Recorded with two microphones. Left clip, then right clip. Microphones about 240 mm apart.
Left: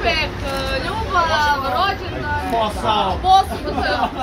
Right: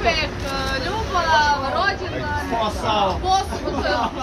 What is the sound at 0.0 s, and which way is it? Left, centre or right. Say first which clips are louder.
Vehicle: left 1 dB; centre.